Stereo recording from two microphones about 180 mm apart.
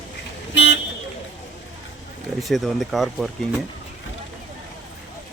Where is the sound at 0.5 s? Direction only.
90° left.